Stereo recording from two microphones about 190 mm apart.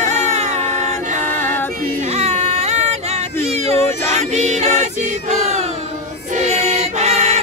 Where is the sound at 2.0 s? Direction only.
35° right (ahead or behind).